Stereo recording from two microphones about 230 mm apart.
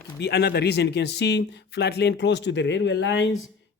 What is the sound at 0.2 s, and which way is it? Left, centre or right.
Speech, left.